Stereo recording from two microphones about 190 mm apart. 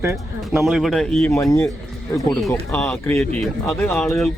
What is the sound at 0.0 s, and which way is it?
Speech, 10° right (ahead or behind).